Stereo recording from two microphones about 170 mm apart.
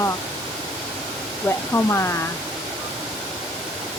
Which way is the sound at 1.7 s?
15° left (ahead or behind).